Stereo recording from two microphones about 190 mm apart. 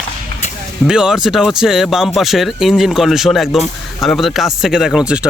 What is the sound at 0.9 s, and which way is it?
Speech, 5° right (ahead or behind).